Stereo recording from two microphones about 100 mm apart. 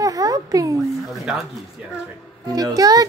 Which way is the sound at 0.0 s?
35° right (ahead or behind).